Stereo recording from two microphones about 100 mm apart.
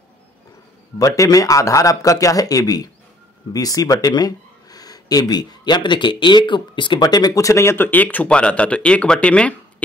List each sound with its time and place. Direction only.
0.9 s speech: 35° left (ahead or behind); by 9.6 s 10° left (ahead or behind)